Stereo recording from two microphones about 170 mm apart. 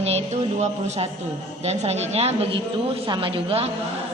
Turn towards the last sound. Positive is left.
turn(degrees=-35)  # may be behind; listen again after turning